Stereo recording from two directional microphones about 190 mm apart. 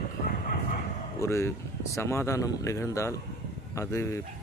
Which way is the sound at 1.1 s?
15° left (ahead or behind).